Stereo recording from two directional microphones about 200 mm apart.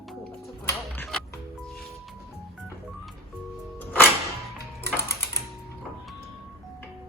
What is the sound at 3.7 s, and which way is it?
Music, 10° left (ahead or behind).